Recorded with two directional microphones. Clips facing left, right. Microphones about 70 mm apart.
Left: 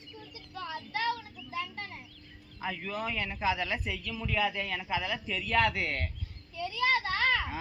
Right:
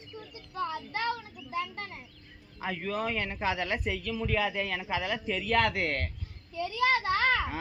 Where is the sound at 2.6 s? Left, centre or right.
Right.